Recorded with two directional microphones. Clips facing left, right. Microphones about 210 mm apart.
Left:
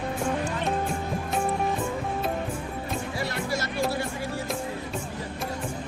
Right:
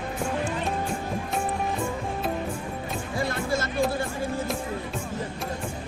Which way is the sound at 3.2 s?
50° right (ahead or behind).